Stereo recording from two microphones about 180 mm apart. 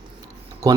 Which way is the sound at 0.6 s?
20° right (ahead or behind).